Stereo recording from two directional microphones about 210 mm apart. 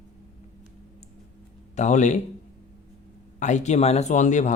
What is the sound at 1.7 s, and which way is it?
Speech, 35° left (ahead or behind).